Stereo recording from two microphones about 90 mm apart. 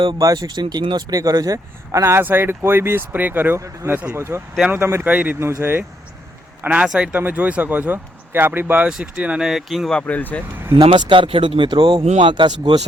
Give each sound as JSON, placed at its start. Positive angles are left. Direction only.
{"t": 0.2, "sound": "speech", "side_deg": -45}
{"t": 1.1, "sound": "speech", "side_deg": -40}
{"t": 5.4, "sound": "a man's voice", "side_deg": -30}
{"t": 6.8, "sound": "speech", "side_deg": -5}
{"t": 7.1, "sound": "speech", "side_deg": -20}
{"t": 8.9, "sound": "speech", "side_deg": -10}
{"t": 10.0, "sound": "speech", "side_deg": 20}
{"t": 10.8, "sound": "speech", "side_deg": -60}